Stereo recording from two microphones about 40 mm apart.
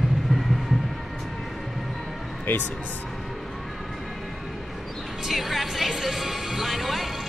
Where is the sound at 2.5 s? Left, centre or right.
Left.